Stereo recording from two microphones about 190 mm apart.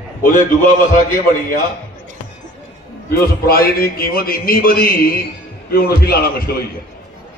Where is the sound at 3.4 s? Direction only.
50° left (ahead or behind).